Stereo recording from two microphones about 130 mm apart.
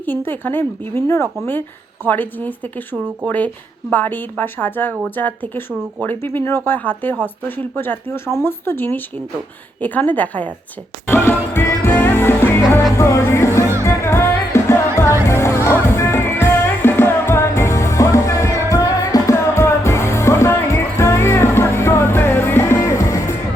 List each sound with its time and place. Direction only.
0.0 s speech: 15° left (ahead or behind)
11.0 s music: 15° left (ahead or behind)